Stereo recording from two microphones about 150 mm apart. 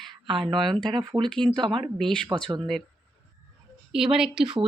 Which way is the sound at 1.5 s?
35° right (ahead or behind).